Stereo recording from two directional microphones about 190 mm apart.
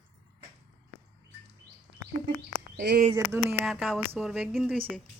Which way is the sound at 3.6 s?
Centre (ahead or behind).